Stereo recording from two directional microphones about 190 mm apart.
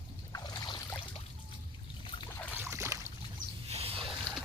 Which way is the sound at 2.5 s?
15° right (ahead or behind).